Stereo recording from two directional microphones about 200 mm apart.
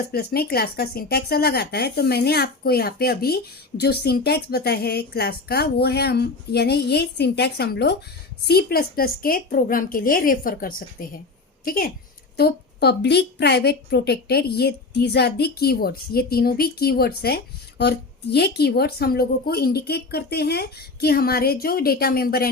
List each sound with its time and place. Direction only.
0.1 s a woman's voice: 50° left (ahead or behind)